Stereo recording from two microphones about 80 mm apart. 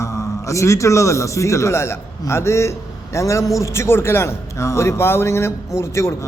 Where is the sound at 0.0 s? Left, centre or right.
Left.